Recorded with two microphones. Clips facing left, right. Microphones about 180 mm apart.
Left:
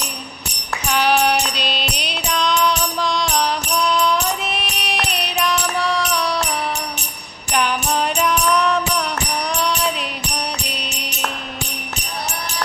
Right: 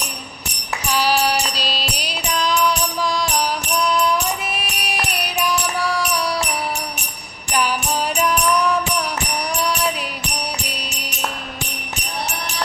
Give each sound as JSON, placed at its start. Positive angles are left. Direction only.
{"t": 0.9, "sound": "music", "side_deg": 60}
{"t": 2.3, "sound": "music", "side_deg": -5}
{"t": 7.5, "sound": "music", "side_deg": -5}